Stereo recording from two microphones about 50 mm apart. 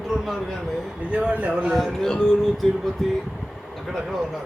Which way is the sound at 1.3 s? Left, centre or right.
Right.